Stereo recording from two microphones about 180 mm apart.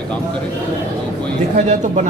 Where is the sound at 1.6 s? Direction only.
45° right (ahead or behind).